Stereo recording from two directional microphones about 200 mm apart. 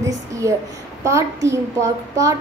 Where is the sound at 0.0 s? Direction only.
15° right (ahead or behind).